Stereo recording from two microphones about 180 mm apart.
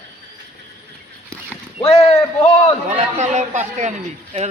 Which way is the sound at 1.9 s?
30° left (ahead or behind).